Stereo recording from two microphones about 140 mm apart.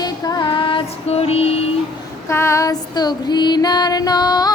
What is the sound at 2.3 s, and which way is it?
Female singing, 20° left (ahead or behind).